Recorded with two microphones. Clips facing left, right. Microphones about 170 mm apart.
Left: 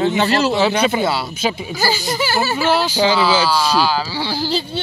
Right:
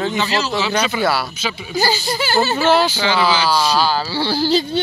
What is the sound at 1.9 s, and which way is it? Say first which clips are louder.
Speech: right 1 dB; 15° left (ahead or behind).